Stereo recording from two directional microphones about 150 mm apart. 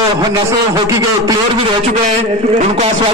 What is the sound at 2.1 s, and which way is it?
Speech, 45° right (ahead or behind).